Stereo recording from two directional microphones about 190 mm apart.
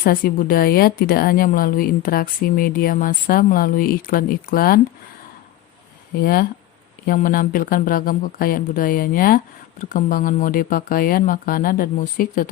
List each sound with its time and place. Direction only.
0.0 s a woman's voice: 50° left (ahead or behind)
6.1 s a woman's voice: 50° left (ahead or behind)